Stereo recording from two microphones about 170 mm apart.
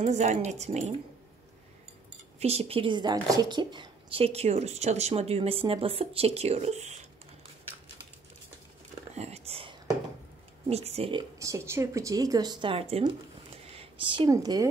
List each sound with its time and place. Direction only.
0.0 s a woman's voice: 40° right (ahead or behind)
2.4 s a woman's voice: 35° right (ahead or behind)
9.1 s whispering: 40° right (ahead or behind)
10.7 s a woman's voice: 35° right (ahead or behind)
11.3 s speech: 20° right (ahead or behind); by 13.1 s 35° right (ahead or behind)
13.6 s a sound: 35° right (ahead or behind)